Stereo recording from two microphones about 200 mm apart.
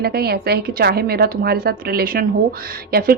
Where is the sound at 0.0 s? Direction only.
50° right (ahead or behind).